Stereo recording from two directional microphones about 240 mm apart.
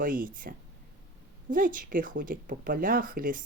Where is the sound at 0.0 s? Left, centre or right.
Right.